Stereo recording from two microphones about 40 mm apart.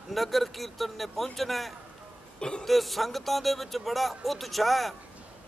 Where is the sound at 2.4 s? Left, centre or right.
Left.